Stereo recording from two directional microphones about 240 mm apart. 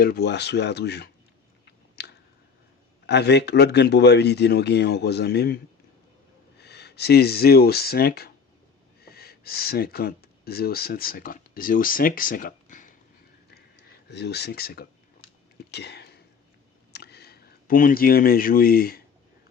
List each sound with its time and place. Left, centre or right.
0.0 s speech: left
1.6 s chewing: left
3.1 s speech: left
6.6 s speech: left
13.5 s a sound: left